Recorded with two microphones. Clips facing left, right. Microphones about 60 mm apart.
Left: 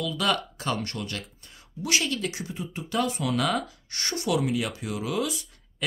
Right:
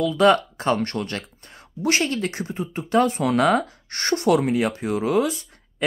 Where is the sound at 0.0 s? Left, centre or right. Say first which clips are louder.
Right 10 dB; right.